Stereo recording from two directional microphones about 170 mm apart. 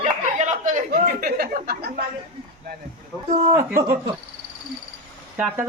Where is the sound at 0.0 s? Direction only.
45° right (ahead or behind).